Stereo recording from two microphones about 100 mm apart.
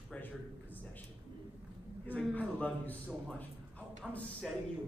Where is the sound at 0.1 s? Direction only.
15° left (ahead or behind).